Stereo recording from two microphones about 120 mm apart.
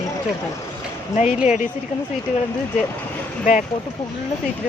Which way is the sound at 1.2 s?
70° left (ahead or behind).